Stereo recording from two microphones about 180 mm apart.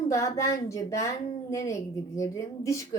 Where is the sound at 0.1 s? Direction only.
15° left (ahead or behind).